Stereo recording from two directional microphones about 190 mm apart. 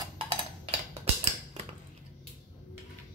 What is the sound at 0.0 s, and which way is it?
Tick-tock, 25° right (ahead or behind).